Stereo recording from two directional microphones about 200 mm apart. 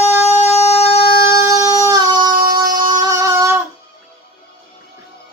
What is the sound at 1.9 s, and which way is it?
Music, 20° right (ahead or behind).